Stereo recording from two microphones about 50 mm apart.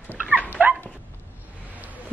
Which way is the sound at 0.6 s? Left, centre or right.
Right.